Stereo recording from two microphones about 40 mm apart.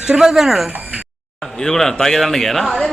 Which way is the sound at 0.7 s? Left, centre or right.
Right.